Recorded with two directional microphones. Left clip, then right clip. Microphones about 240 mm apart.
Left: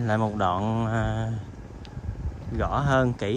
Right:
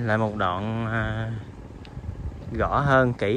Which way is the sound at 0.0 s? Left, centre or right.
Centre.